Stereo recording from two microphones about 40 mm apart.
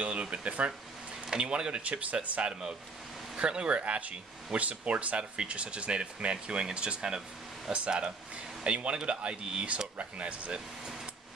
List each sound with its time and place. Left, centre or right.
0.0 s speech: right
3.3 s speech: right